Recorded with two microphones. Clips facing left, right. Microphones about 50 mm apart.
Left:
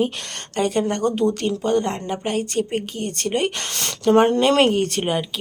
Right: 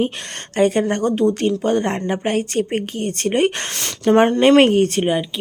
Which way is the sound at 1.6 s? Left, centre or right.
Right.